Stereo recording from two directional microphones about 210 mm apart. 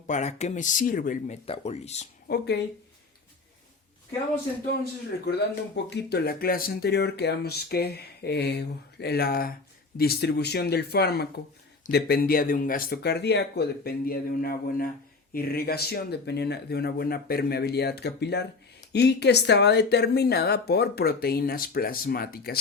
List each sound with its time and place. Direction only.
0.1 s speech: 35° left (ahead or behind)
2.2 s speech: 50° left (ahead or behind)
4.8 s speech: 50° left (ahead or behind)